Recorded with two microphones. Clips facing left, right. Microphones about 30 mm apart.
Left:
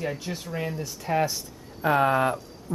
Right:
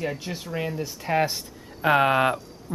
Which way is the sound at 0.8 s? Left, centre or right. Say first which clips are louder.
Right 2 dB; right.